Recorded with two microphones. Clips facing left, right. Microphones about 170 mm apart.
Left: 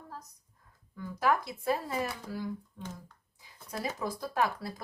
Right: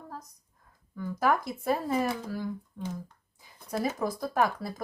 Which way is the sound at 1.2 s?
50° right (ahead or behind).